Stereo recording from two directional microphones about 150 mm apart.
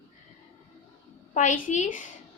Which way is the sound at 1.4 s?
60° left (ahead or behind).